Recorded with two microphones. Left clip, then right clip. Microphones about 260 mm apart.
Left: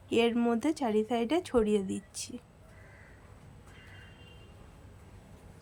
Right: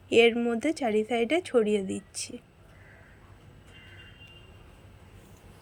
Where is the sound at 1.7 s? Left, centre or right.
Left.